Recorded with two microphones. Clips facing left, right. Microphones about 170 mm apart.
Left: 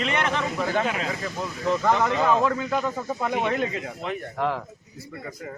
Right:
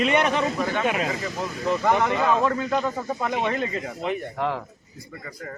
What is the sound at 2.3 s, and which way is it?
Speech, 5° left (ahead or behind).